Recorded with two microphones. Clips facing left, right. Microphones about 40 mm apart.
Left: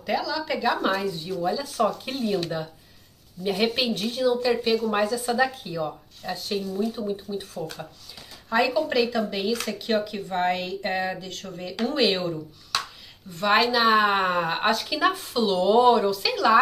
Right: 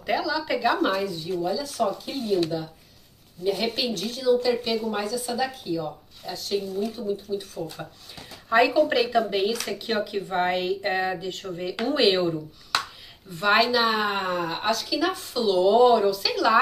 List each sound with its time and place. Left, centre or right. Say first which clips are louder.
0.0 s speech: right 1 dB; centre
1.4 s speech: left 2 dB; left
3.4 s a woman's voice: left 1 dB; left
8.5 s speech: right 3 dB; centre
12.2 s speech: right 4 dB; centre
13.4 s speech: even; centre
14.1 s speech: left 4 dB; left; by 16.5 s centre